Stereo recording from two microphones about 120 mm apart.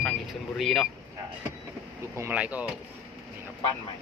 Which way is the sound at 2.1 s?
25° right (ahead or behind).